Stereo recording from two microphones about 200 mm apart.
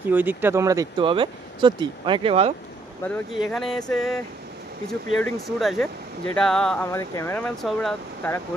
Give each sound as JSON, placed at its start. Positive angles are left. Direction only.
{"t": 0.1, "sound": "speech", "side_deg": -10}
{"t": 3.0, "sound": "speech", "side_deg": 0}
{"t": 5.2, "sound": "speech", "side_deg": 0}